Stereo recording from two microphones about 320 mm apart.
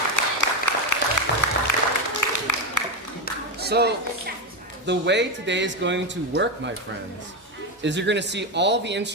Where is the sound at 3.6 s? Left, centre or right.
Right.